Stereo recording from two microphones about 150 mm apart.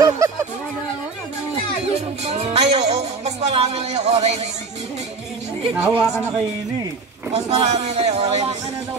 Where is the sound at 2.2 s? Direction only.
45° right (ahead or behind).